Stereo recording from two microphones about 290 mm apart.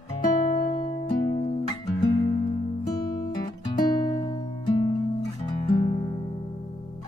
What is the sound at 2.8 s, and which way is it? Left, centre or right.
Guitar, centre.